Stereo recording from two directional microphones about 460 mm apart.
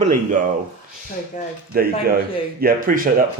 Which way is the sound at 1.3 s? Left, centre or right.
Centre.